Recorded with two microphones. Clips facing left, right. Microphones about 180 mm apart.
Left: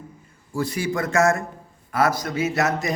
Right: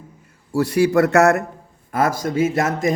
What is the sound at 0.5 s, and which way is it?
Speech, 70° right (ahead or behind).